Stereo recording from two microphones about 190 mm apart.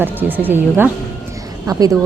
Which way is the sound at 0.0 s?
10° right (ahead or behind).